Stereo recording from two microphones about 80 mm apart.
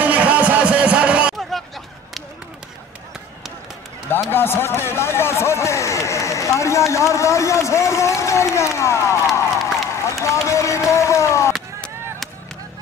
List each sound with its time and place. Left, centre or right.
0.0 s music: centre
4.3 s speech: left
10.0 s a sound: left